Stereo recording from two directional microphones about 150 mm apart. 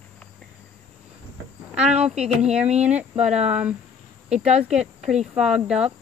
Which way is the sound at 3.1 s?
45° right (ahead or behind).